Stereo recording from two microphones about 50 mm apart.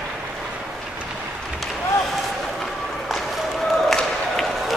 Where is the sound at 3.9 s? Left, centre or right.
Centre.